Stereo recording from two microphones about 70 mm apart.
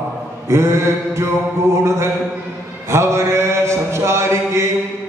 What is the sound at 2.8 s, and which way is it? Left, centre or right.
Mantra, right.